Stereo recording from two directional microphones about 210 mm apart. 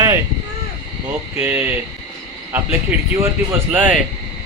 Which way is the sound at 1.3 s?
10° right (ahead or behind).